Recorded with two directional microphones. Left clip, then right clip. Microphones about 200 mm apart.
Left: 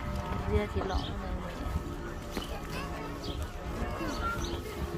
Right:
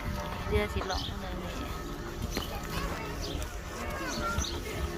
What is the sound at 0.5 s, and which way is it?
Speech, 5° left (ahead or behind).